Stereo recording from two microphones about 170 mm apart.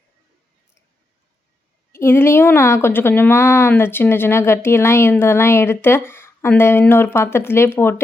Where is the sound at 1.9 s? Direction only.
15° left (ahead or behind).